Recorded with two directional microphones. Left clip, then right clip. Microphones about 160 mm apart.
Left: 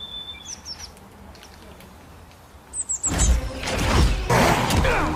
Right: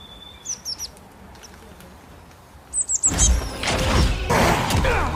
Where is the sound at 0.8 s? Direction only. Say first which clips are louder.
Right 5 dB; 25° right (ahead or behind).